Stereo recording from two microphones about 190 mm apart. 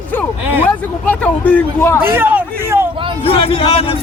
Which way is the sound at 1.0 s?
10° left (ahead or behind).